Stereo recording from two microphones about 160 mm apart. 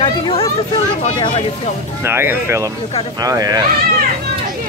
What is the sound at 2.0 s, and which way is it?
Speech, 15° right (ahead or behind).